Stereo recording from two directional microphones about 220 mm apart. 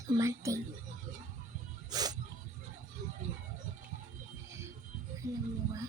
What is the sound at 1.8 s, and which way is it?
Music, 15° right (ahead or behind).